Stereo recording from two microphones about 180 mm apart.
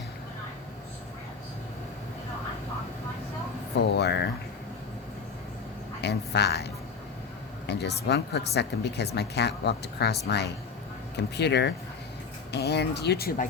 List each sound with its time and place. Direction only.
3.9 s speech: 65° left (ahead or behind)
6.0 s speech: 70° left (ahead or behind)
7.7 s speech: 65° left (ahead or behind); by 13.5 s 50° left (ahead or behind)